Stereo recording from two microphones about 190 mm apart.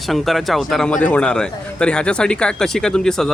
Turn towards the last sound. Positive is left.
turn(degrees=5)  # may be behind; listen again after turning